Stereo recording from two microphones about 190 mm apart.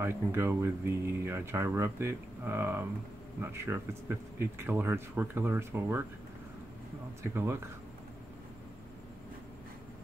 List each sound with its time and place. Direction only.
0.0 s speech: 10° right (ahead or behind)
7.3 s speech: 15° right (ahead or behind)